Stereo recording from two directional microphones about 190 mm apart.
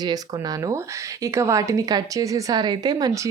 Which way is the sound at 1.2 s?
15° right (ahead or behind).